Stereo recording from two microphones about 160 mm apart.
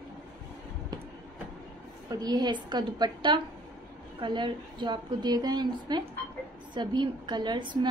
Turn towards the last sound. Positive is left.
turn(degrees=-30)  # may be behind; listen again after turning